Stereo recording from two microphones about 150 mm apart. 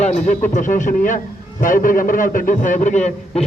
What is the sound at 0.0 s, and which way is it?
A man's voice, 50° left (ahead or behind).